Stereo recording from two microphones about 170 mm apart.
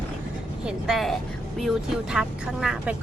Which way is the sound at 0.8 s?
Centre (ahead or behind).